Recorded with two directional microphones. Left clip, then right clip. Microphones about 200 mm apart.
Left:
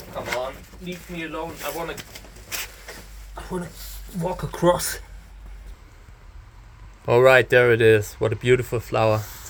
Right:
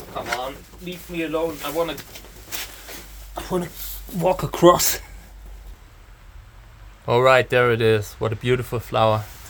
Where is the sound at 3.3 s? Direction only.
50° right (ahead or behind).